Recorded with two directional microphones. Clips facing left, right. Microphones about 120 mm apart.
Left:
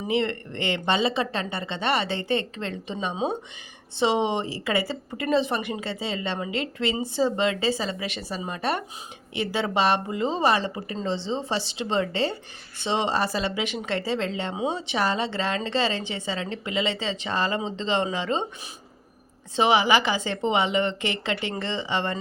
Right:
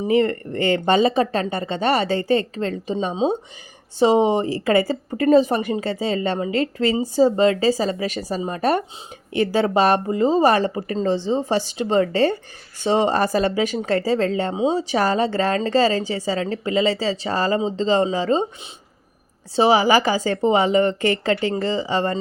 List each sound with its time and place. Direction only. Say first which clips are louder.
0.1 s a woman's voice: right 7 dB; 40° right (ahead or behind)
19.5 s a woman's voice: right 5 dB; 35° right (ahead or behind)